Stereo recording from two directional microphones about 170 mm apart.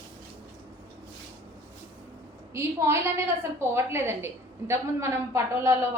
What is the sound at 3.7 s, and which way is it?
A woman's voice, 15° right (ahead or behind).